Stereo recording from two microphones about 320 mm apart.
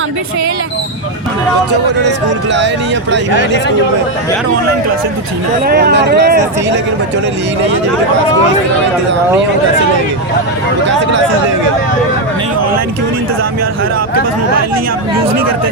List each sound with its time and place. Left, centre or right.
2.0 s speech: right
5.6 s speech: right